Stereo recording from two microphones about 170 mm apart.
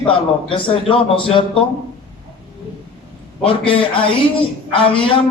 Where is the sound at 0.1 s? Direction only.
30° left (ahead or behind).